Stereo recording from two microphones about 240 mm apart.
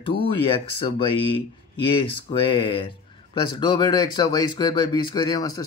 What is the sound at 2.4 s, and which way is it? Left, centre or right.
Speech, centre.